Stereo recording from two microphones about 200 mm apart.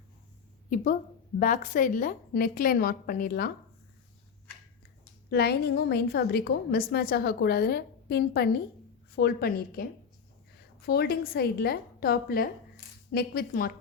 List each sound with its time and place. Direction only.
1.4 s a woman's voice: 40° left (ahead or behind)
5.3 s a woman's voice: 50° left (ahead or behind)
10.8 s a woman's voice: 50° left (ahead or behind)